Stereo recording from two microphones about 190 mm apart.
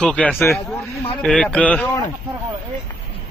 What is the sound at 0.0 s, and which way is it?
Speech, 5° left (ahead or behind).